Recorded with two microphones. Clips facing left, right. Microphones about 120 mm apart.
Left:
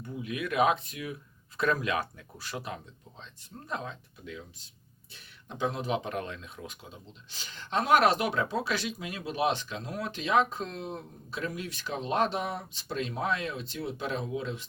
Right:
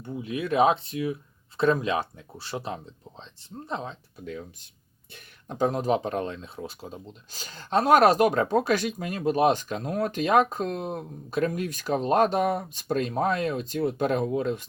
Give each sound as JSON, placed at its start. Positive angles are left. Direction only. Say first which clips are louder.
{"t": 0.0, "sound": "speech", "louder": "right 4 dB", "side_deg": -30}
{"t": 4.3, "sound": "speech", "louder": "right 6 dB", "side_deg": -45}